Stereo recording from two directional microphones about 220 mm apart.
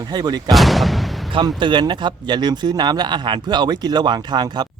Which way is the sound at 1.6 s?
20° right (ahead or behind).